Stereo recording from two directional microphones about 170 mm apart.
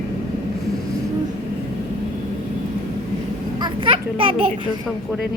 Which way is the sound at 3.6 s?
30° right (ahead or behind).